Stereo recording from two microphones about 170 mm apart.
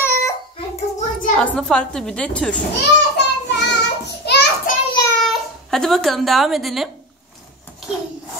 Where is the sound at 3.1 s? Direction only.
90° left.